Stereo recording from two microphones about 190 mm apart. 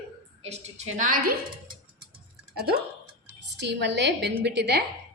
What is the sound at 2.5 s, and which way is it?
Speech, 55° right (ahead or behind).